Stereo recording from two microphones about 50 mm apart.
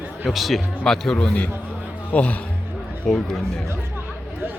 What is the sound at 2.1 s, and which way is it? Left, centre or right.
Speech, left.